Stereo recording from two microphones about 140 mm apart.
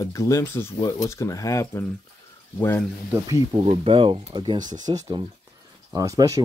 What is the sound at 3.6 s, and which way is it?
Speech, 45° right (ahead or behind).